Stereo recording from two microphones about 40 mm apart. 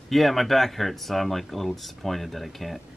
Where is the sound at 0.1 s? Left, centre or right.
Centre.